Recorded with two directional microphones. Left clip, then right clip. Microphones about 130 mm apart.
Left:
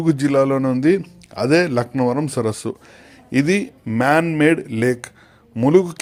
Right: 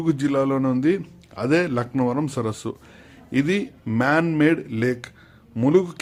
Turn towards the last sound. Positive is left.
turn(degrees=20)  # may be behind; listen again after turning